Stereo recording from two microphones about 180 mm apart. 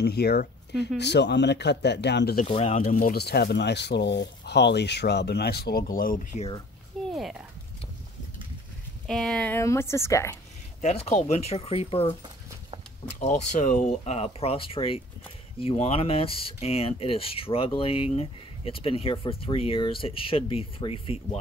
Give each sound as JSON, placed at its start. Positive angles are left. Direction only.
{"t": 0.0, "sound": "speech", "side_deg": 60}
{"t": 2.4, "sound": "speech", "side_deg": 35}
{"t": 2.9, "sound": "speech", "side_deg": 55}
{"t": 7.1, "sound": "a sound", "side_deg": 0}
{"t": 9.0, "sound": "speech", "side_deg": 5}
{"t": 10.8, "sound": "speech", "side_deg": 35}
{"t": 13.2, "sound": "speech", "side_deg": 40}